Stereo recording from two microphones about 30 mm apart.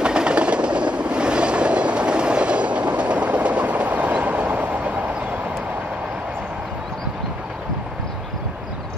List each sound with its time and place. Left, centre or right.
0.0 s train: right